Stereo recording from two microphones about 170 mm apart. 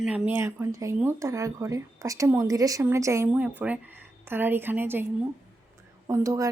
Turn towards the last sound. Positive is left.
turn(degrees=-20)  # may be behind; listen again after turning